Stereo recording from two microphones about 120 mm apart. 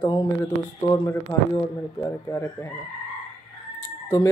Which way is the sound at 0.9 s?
25° left (ahead or behind).